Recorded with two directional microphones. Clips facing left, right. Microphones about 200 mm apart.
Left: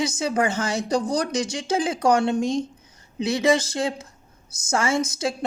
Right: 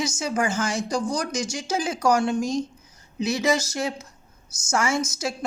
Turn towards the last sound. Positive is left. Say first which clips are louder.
# left 3 dB
turn(degrees=30)  # may be behind; listen again after turning